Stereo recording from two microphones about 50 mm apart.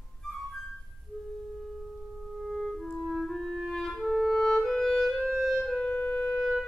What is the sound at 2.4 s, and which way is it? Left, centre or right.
Clarinet, centre.